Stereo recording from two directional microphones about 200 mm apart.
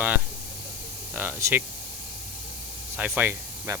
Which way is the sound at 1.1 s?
10° right (ahead or behind).